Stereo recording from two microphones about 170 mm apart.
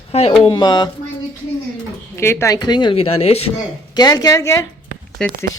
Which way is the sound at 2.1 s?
15° left (ahead or behind).